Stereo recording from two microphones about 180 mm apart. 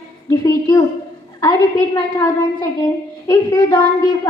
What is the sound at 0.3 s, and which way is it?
Speech, 20° left (ahead or behind).